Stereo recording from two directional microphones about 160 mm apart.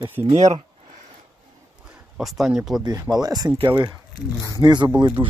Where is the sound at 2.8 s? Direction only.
25° right (ahead or behind).